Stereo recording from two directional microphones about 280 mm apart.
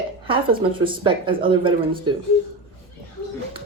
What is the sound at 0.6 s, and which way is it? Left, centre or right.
Speech, centre.